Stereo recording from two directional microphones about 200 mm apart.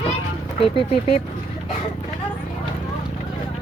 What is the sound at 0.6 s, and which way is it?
Speech, 30° left (ahead or behind).